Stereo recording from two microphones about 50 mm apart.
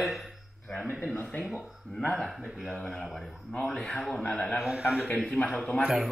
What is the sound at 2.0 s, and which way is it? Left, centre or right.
Speech, centre.